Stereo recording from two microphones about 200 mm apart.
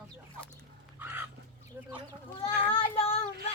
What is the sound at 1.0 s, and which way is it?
Fowl, 10° right (ahead or behind).